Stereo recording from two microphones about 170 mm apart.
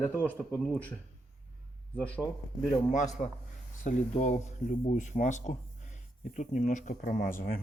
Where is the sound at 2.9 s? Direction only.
45° left (ahead or behind).